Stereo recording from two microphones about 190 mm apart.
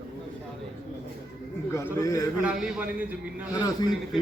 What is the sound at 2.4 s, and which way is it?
A man's voice, 5° right (ahead or behind).